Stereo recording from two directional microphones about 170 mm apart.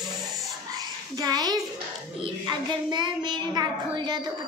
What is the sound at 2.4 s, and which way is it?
Child singing, 25° right (ahead or behind).